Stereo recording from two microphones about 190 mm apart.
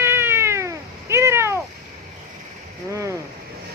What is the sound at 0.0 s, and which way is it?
Cat, 10° right (ahead or behind).